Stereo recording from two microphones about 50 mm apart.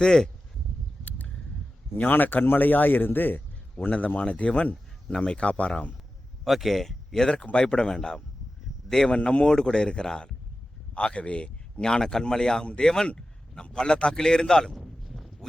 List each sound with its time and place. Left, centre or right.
0.0 s speech: centre
2.0 s a man's voice: left
3.8 s a man's voice: left
6.4 s speech: centre
14.7 s a sound: centre